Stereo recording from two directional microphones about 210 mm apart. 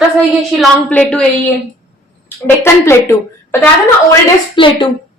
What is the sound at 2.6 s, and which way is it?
Speech, 10° left (ahead or behind).